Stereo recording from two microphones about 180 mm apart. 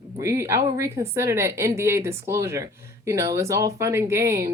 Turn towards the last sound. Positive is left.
turn(degrees=-15)  # may be behind; listen again after turning